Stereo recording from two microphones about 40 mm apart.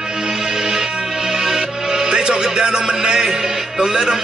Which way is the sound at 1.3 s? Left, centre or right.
Centre.